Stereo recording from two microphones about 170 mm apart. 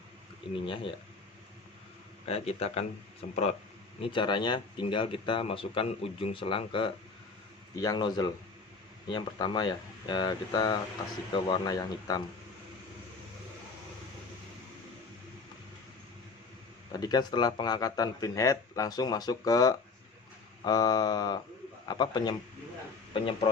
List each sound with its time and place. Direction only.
0.5 s speech: 30° left (ahead or behind)
2.2 s speech: 40° left (ahead or behind)
16.9 s speech: 25° left (ahead or behind)